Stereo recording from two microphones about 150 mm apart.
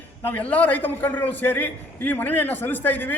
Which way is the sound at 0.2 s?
10° left (ahead or behind).